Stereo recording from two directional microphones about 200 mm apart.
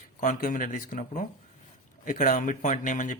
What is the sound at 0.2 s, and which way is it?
Speech, 40° left (ahead or behind).